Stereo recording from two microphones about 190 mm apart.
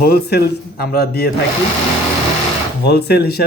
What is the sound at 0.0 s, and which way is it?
Speech, 55° left (ahead or behind).